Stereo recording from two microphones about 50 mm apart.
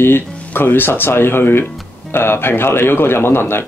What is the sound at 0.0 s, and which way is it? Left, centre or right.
Speech, left.